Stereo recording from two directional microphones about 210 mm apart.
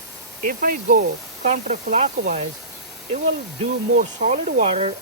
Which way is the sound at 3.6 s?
35° right (ahead or behind).